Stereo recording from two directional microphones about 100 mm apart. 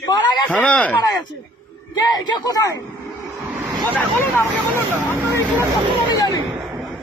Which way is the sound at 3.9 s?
20° left (ahead or behind).